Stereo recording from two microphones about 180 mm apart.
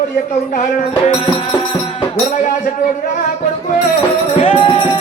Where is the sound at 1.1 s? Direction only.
30° left (ahead or behind).